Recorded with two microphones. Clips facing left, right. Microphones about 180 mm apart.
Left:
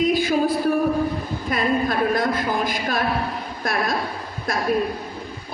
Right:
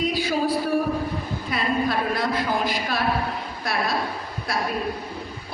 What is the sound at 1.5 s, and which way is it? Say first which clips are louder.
A man's voice: left 3 dB; 45° left (ahead or behind).